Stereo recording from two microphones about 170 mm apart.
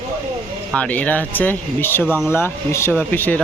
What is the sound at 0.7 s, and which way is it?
Speech, 5° left (ahead or behind).